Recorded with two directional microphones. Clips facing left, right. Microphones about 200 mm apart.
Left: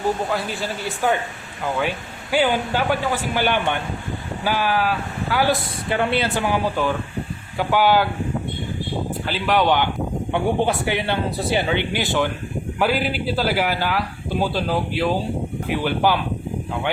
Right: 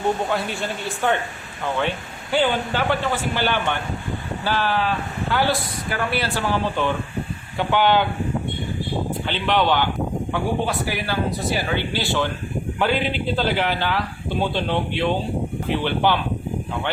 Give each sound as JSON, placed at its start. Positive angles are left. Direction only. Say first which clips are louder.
{"t": 0.3, "sound": "speech", "louder": "even", "side_deg": 0}
{"t": 5.9, "sound": "speech", "louder": "left 4 dB", "side_deg": 25}
{"t": 9.2, "sound": "speech", "louder": "left 2 dB", "side_deg": 5}
{"t": 12.8, "sound": "speech", "louder": "left 1 dB", "side_deg": 5}